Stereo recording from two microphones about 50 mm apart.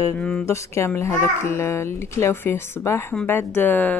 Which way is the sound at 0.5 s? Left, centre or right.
Left.